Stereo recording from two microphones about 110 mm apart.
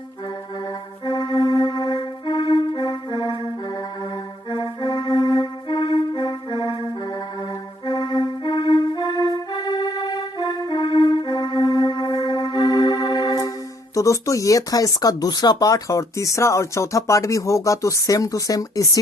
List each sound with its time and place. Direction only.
1.0 s music: 45° left (ahead or behind)
3.2 s music: 30° right (ahead or behind)
3.7 s music: 45° left (ahead or behind)
7.9 s music: 40° left (ahead or behind)
13.9 s speech: 30° left (ahead or behind)